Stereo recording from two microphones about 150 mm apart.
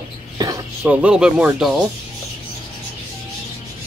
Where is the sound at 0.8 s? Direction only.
5° right (ahead or behind).